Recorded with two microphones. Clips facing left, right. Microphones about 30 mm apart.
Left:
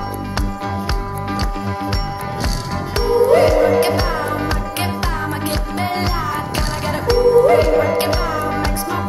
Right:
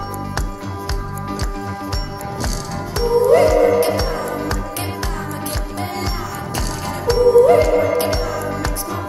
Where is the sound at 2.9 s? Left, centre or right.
Left.